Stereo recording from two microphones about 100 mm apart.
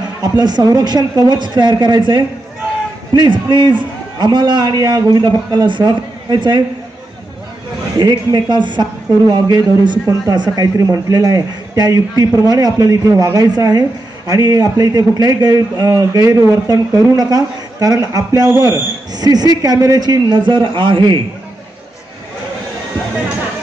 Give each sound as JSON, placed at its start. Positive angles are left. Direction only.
{"t": 0.2, "sound": "a man's voice", "side_deg": -45}
{"t": 8.0, "sound": "a man's voice", "side_deg": -45}